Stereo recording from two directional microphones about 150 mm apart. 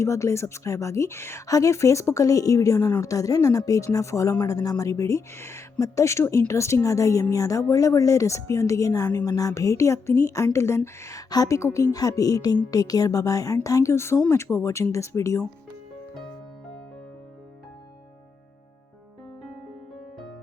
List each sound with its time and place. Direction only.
0.0 s a woman's voice: 20° left (ahead or behind)